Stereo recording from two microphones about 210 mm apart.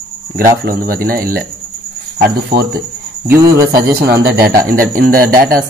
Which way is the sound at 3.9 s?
50° right (ahead or behind).